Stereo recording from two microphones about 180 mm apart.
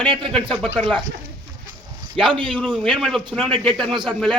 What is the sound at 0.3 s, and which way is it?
Speech, 5° left (ahead or behind).